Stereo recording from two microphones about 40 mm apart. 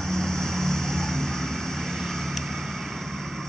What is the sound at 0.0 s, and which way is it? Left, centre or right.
Vehicle, centre.